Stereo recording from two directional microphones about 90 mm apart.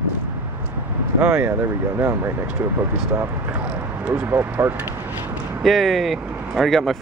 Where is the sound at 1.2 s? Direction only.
25° right (ahead or behind).